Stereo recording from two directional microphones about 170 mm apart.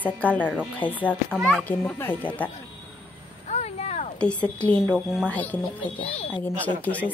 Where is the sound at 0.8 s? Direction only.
30° left (ahead or behind).